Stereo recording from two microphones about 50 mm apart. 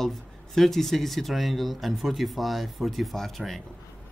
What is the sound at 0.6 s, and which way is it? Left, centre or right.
Speech, centre.